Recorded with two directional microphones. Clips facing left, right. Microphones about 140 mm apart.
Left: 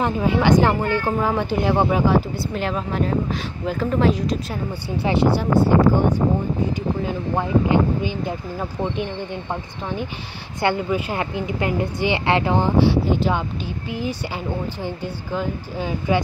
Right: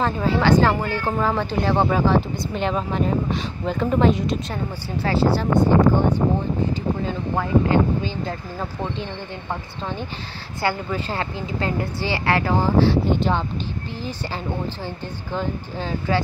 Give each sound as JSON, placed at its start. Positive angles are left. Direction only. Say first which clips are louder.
{"t": 0.0, "sound": "a woman's voice", "louder": "left 1 dB", "side_deg": 15}
{"t": 5.0, "sound": "a woman's voice", "louder": "left 1 dB", "side_deg": 15}